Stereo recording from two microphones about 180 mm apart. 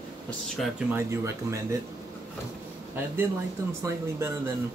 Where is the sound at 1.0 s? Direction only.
15° right (ahead or behind).